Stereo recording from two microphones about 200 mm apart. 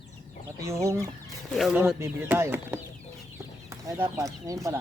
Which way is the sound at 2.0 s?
10° right (ahead or behind).